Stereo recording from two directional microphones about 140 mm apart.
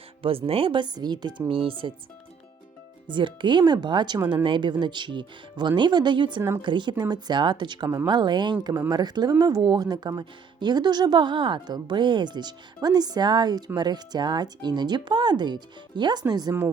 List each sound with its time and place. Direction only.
0.2 s speech: 40° right (ahead or behind)
3.1 s speech: 35° right (ahead or behind)